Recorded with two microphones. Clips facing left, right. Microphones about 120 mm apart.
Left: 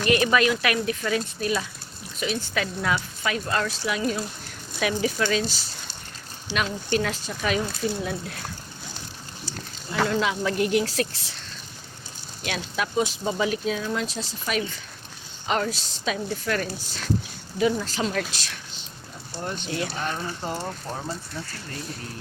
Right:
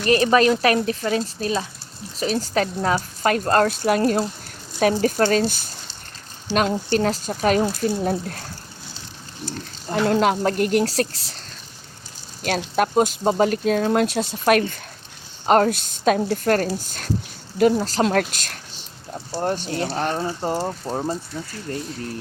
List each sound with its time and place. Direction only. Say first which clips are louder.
0.0 s speech: right 4 dB; 35° right (ahead or behind)
3.2 s speech: right 9 dB; 50° right (ahead or behind)
4.8 s speech: right 6 dB; 45° right (ahead or behind)
10.1 s speech: right 9 dB; 50° right (ahead or behind)
17.7 s speech: right 7 dB; 40° right (ahead or behind)
18.0 s speech: right 7 dB; 55° right (ahead or behind); by 19.9 s 40° right (ahead or behind)
19.9 s speech: right 6 dB; 50° right (ahead or behind)
20.1 s speech: right 7 dB; 35° right (ahead or behind)